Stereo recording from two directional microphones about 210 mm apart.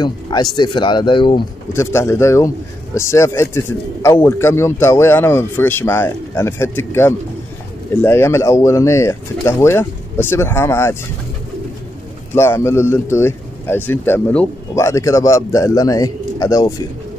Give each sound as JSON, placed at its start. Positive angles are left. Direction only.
{"t": 0.0, "sound": "speech", "side_deg": 20}
{"t": 1.7, "sound": "speech", "side_deg": 10}
{"t": 12.4, "sound": "speech", "side_deg": 10}